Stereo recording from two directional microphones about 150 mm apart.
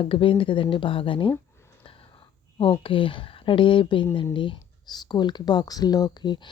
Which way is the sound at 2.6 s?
35° left (ahead or behind).